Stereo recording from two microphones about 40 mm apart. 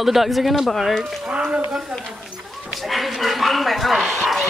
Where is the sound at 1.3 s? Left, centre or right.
Right.